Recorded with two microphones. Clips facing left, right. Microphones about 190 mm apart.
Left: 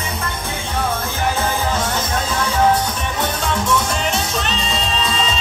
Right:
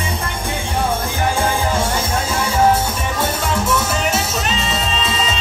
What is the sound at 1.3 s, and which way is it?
Music, 10° right (ahead or behind).